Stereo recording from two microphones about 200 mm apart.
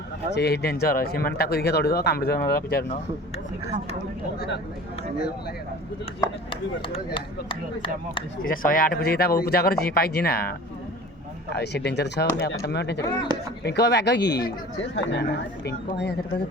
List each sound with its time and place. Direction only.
0.3 s speech: 55° left (ahead or behind)
4.4 s speech: 60° left (ahead or behind)
6.1 s speech: 15° left (ahead or behind)
8.4 s speech: 45° left (ahead or behind)
11.5 s speech: 55° left (ahead or behind)